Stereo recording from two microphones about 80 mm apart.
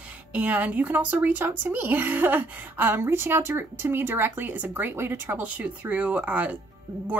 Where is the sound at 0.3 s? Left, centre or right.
Centre.